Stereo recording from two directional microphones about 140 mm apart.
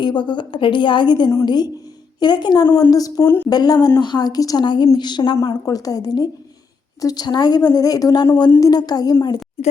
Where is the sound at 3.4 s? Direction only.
30° left (ahead or behind).